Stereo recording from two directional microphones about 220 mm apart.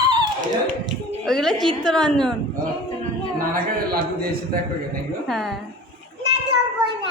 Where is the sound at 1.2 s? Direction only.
Centre (ahead or behind).